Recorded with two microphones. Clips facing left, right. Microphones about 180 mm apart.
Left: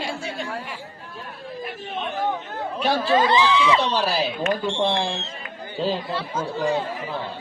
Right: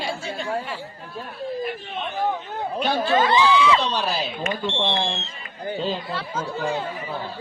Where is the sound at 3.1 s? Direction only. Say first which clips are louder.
Right 1 dB; 25° left (ahead or behind).